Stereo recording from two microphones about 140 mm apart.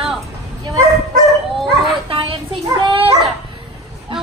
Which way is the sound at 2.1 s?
40° right (ahead or behind).